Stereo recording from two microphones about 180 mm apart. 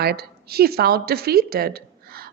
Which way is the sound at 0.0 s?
60° right (ahead or behind).